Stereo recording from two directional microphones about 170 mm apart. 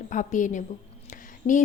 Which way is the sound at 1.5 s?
40° left (ahead or behind).